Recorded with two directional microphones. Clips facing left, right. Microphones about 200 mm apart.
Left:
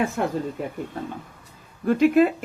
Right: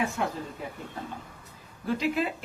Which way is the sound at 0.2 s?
55° left (ahead or behind).